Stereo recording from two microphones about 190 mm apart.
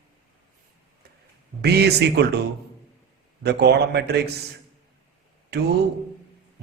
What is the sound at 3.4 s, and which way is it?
Speech, 60° right (ahead or behind).